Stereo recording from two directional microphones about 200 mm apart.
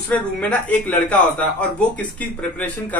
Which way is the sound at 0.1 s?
5° left (ahead or behind).